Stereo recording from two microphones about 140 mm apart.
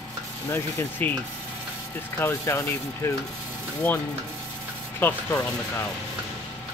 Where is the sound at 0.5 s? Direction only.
15° left (ahead or behind).